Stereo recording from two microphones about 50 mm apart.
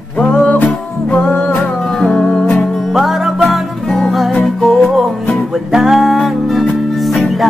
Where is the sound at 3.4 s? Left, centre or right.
Centre.